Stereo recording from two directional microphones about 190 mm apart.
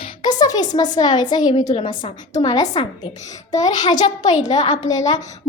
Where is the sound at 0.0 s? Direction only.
20° left (ahead or behind).